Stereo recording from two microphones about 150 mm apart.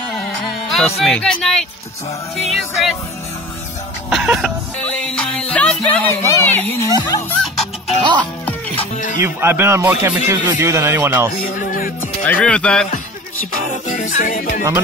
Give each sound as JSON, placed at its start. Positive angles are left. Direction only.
{"t": 0.7, "sound": "speech", "side_deg": 0}
{"t": 2.3, "sound": "music", "side_deg": 0}
{"t": 4.1, "sound": "music", "side_deg": -5}
{"t": 4.7, "sound": "music", "side_deg": 5}
{"t": 6.9, "sound": "music", "side_deg": 25}
{"t": 8.0, "sound": "music", "side_deg": -30}
{"t": 8.7, "sound": "music", "side_deg": 55}
{"t": 9.2, "sound": "speech", "side_deg": -15}
{"t": 11.4, "sound": "music", "side_deg": 70}
{"t": 12.2, "sound": "speech", "side_deg": 10}
{"t": 13.8, "sound": "music", "side_deg": 60}